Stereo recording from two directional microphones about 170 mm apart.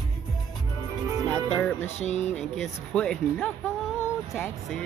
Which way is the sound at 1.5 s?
10° left (ahead or behind).